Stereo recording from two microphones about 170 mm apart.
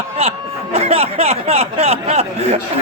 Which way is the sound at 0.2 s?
35° right (ahead or behind).